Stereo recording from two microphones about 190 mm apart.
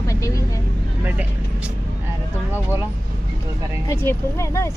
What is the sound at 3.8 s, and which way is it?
Speech, 15° left (ahead or behind).